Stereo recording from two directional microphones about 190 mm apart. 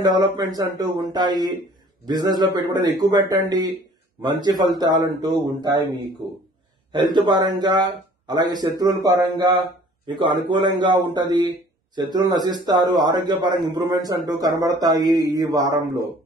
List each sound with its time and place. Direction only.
0.0 s a man's voice: 20° right (ahead or behind)
4.7 s a man's voice: 20° right (ahead or behind)